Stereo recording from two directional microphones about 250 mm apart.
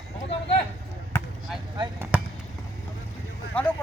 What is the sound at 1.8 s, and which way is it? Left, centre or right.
Basketball bounce, centre.